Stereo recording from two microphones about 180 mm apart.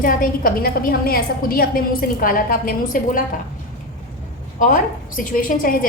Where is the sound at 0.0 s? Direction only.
50° left (ahead or behind).